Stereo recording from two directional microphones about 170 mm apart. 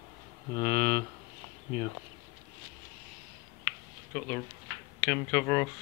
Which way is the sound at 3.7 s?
10° left (ahead or behind).